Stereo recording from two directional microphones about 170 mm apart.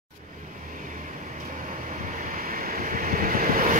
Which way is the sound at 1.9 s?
55° right (ahead or behind).